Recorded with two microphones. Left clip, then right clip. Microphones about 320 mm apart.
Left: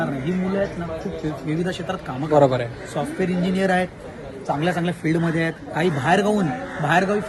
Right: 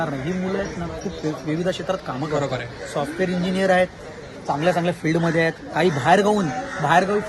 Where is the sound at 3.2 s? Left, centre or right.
Centre.